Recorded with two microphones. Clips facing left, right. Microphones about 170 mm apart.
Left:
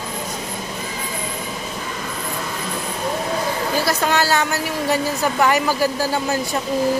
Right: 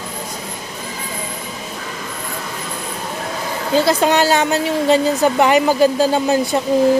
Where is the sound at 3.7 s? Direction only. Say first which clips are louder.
Right 8 dB; 20° right (ahead or behind).